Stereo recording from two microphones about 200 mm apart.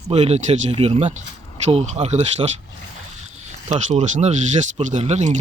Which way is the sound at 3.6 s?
35° right (ahead or behind).